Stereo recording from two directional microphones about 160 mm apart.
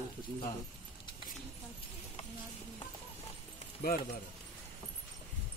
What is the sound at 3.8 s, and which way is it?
Speech, 75° left (ahead or behind).